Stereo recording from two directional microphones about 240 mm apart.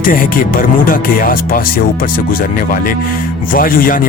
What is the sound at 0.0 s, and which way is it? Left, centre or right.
Speech, left.